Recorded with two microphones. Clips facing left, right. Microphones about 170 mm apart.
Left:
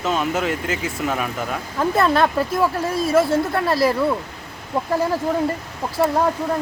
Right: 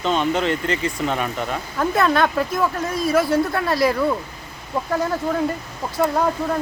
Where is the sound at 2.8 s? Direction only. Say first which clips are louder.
Left 1 dB; 30° left (ahead or behind).